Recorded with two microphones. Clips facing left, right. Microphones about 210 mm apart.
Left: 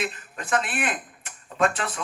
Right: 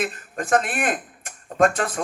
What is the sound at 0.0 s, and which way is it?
Speech, 45° right (ahead or behind).